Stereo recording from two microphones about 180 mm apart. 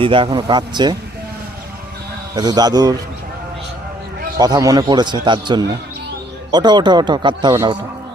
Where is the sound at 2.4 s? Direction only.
20° right (ahead or behind).